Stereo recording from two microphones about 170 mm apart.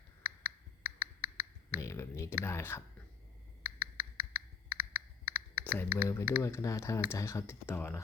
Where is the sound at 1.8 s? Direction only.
15° left (ahead or behind).